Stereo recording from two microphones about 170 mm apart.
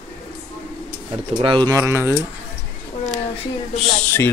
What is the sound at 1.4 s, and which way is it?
Speech, 25° right (ahead or behind).